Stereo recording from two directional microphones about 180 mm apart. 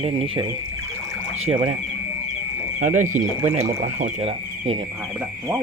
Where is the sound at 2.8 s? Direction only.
45° right (ahead or behind).